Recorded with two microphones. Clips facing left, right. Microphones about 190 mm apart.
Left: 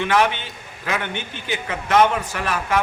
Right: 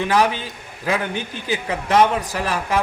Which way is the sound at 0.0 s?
35° right (ahead or behind).